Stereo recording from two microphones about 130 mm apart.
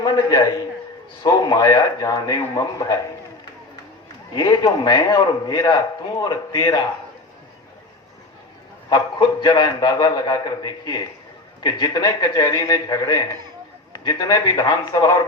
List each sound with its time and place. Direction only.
0.0 s a man's voice: 30° left (ahead or behind)
4.4 s a man's voice: 35° left (ahead or behind)
8.9 s a man's voice: 25° left (ahead or behind)